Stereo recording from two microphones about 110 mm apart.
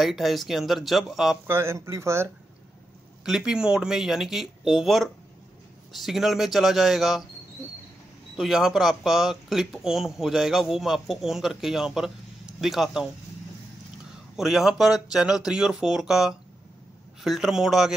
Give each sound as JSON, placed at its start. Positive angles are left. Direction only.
{"t": 0.0, "sound": "speech", "side_deg": 0}
{"t": 1.5, "sound": "speech", "side_deg": -25}
{"t": 3.3, "sound": "speech", "side_deg": -5}
{"t": 8.4, "sound": "speech", "side_deg": -5}
{"t": 14.3, "sound": "speech", "side_deg": -5}